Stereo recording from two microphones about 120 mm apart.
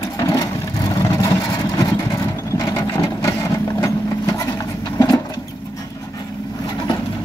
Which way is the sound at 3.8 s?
30° left (ahead or behind).